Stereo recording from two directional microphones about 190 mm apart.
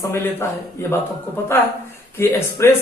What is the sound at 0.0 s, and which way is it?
Speech, 15° left (ahead or behind).